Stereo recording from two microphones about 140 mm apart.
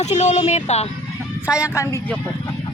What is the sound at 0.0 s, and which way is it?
Speech, 55° left (ahead or behind).